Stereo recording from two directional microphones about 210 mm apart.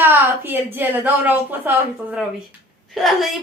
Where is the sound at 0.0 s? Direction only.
10° right (ahead or behind).